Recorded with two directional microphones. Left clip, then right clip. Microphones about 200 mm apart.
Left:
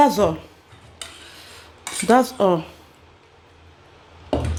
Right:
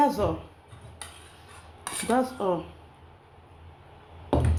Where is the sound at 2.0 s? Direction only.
50° left (ahead or behind).